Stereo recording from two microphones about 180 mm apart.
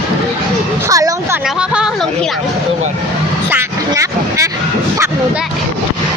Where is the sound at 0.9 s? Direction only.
20° right (ahead or behind).